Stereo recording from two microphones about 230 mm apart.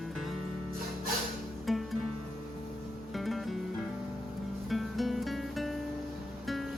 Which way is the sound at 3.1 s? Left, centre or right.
Centre.